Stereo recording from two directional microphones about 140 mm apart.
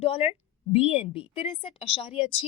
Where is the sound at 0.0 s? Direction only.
45° left (ahead or behind).